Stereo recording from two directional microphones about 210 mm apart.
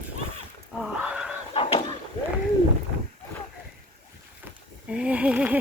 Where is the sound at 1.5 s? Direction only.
25° left (ahead or behind).